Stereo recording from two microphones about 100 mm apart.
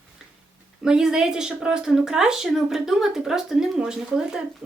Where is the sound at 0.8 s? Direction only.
5° right (ahead or behind).